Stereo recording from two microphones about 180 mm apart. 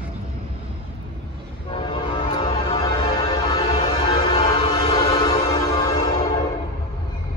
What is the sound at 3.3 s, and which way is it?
Music, 25° left (ahead or behind).